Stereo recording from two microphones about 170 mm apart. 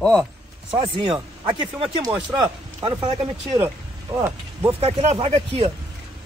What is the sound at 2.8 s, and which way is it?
Speech, 30° right (ahead or behind).